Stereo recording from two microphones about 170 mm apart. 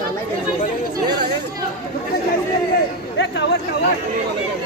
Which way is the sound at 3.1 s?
90° left.